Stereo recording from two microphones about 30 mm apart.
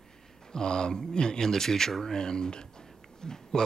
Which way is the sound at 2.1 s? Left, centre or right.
Left.